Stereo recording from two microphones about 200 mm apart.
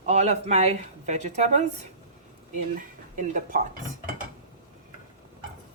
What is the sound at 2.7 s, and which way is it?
Speech, 40° right (ahead or behind).